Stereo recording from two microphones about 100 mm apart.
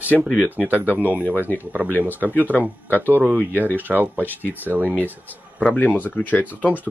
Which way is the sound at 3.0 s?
20° right (ahead or behind).